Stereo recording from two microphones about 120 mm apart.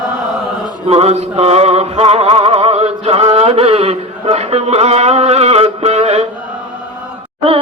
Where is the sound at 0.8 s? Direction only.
60° right (ahead or behind).